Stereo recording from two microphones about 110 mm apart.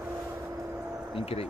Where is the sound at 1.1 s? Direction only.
65° left (ahead or behind).